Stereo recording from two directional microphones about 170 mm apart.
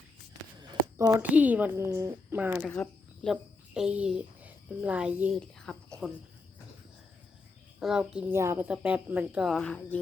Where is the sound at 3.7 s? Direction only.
5° right (ahead or behind).